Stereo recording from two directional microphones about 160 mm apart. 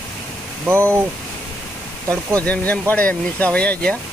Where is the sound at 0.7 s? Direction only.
15° right (ahead or behind).